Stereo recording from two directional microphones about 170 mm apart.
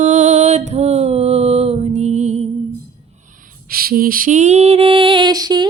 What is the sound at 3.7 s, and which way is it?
Lullaby, 60° right (ahead or behind).